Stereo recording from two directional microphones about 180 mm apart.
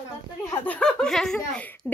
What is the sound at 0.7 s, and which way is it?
Speech, 5° left (ahead or behind).